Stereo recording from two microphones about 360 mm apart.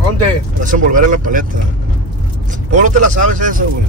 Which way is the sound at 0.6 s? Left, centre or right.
Right.